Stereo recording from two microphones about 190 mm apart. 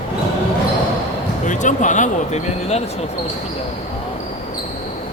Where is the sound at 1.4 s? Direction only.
40° left (ahead or behind).